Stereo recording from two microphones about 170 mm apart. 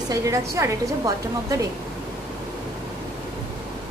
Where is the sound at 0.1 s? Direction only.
20° right (ahead or behind).